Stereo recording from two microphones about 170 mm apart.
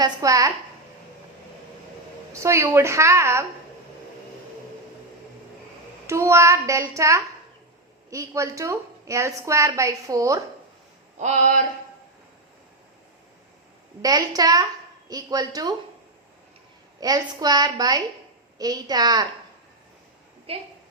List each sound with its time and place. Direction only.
0.0 s a woman's voice: 20° right (ahead or behind)
2.3 s a woman's voice: 15° right (ahead or behind)
6.1 s a woman's voice: 15° right (ahead or behind)
11.2 s a sound: 45° right (ahead or behind)
14.0 s a woman's voice: 20° right (ahead or behind)
17.0 s a woman's voice: 20° right (ahead or behind)
20.5 s a woman's voice: 35° right (ahead or behind)